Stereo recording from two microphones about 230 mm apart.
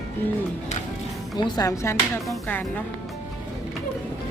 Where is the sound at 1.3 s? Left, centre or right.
Centre.